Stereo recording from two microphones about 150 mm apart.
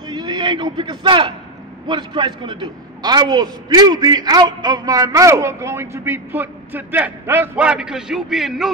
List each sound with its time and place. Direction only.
0.0 s a man's voice: 30° right (ahead or behind); by 8.7 s centre (ahead or behind)